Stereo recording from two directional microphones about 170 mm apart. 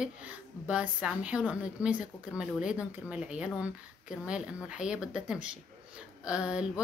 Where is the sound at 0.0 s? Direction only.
5° right (ahead or behind).